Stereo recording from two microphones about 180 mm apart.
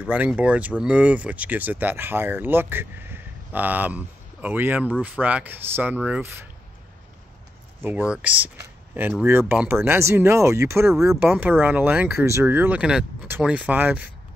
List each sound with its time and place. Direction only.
0.0 s speech: 5° right (ahead or behind)
7.8 s speech: 10° right (ahead or behind)